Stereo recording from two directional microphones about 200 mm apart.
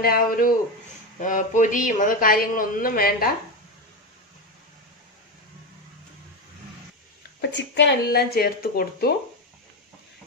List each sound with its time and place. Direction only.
0.0 s a man's voice: 45° left (ahead or behind)
7.5 s a man's voice: 60° left (ahead or behind)